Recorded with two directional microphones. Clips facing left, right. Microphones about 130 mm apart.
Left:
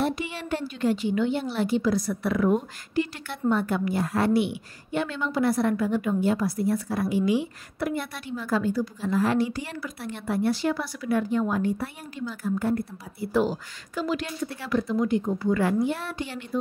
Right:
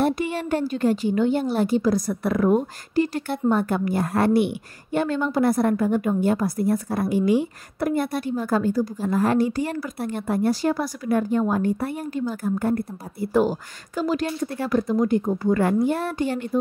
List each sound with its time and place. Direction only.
0.0 s a woman's voice: 45° right (ahead or behind)